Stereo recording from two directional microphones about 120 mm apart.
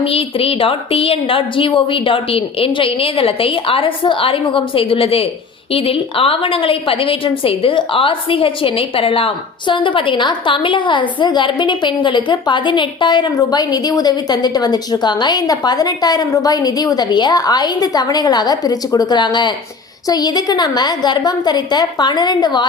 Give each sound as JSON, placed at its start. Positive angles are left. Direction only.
{"t": 0.0, "sound": "a woman's voice", "side_deg": 50}